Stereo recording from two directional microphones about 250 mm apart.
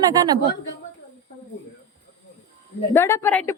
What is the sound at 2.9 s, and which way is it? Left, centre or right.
Speech, centre.